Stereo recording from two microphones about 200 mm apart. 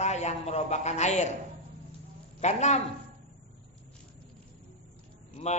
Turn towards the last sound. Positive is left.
turn(degrees=35)  # may be behind; listen again after turning